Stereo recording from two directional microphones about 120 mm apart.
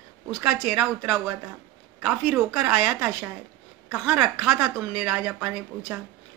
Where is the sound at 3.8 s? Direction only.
5° right (ahead or behind).